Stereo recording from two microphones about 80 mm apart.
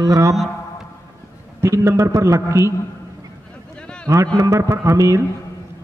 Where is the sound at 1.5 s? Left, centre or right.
Right.